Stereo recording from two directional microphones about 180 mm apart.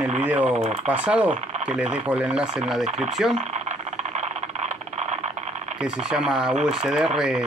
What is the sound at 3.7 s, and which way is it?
Vehicle, 40° right (ahead or behind).